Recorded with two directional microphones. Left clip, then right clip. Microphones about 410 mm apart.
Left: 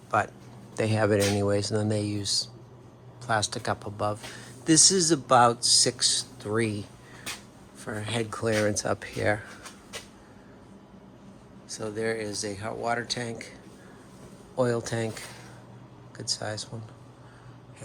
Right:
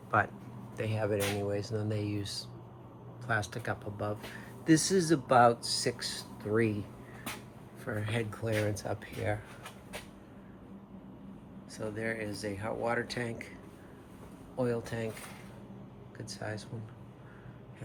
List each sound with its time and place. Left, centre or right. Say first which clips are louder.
0.1 s speech: left 3 dB; centre
0.8 s speech: left 8 dB; centre
7.9 s speech: left 4 dB; centre
11.7 s speech: left 6 dB; centre
14.5 s speech: left 7 dB; centre
16.1 s speech: left 9 dB; centre